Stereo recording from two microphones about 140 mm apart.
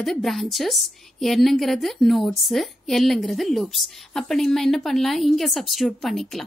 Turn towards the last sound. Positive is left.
turn(degrees=0)  # may be behind; listen again after turning